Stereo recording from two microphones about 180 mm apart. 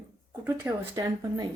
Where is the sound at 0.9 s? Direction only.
20° right (ahead or behind).